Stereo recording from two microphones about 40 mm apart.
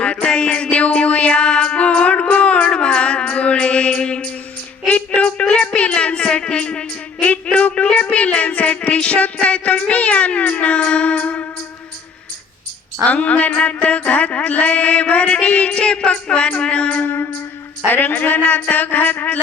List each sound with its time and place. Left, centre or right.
0.0 s music: left
4.9 s speech: left
7.4 s mantra: left
9.9 s cat: left
13.1 s mantra: left
17.1 s music: left
17.8 s a woman's voice: left